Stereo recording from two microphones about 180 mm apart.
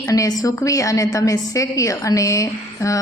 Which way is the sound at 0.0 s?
20° left (ahead or behind).